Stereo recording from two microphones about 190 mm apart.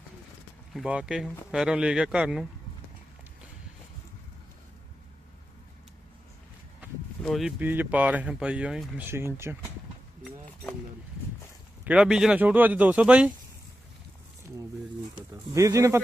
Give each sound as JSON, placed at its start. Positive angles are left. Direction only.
{"t": 0.7, "sound": "speech", "side_deg": -5}
{"t": 7.2, "sound": "speech", "side_deg": 0}
{"t": 9.0, "sound": "speech", "side_deg": -15}
{"t": 11.9, "sound": "speech", "side_deg": -5}
{"t": 15.5, "sound": "speech", "side_deg": -15}